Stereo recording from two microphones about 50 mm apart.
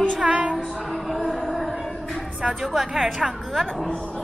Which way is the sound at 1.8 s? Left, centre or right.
Centre.